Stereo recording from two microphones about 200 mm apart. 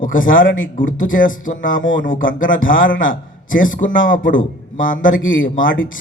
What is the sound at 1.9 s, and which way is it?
A man's voice, 40° left (ahead or behind).